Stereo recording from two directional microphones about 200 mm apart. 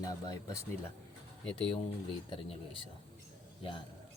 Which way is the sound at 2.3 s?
25° left (ahead or behind).